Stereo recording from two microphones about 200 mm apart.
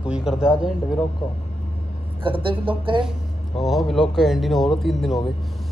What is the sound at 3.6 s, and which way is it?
Speech, centre (ahead or behind).